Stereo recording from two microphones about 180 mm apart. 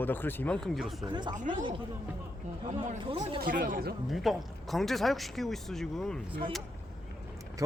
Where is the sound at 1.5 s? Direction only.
25° right (ahead or behind).